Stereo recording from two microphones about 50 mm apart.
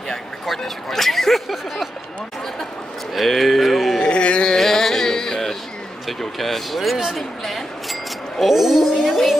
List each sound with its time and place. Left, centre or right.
0.5 s speech: centre
3.2 s a sound: centre
4.0 s carnatic music: left
4.6 s music: centre
6.0 s speech: centre